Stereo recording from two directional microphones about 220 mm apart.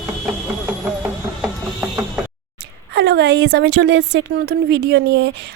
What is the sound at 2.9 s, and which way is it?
A woman's voice, 50° right (ahead or behind).